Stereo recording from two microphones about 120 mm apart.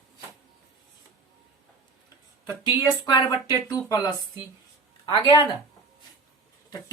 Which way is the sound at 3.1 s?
35° left (ahead or behind).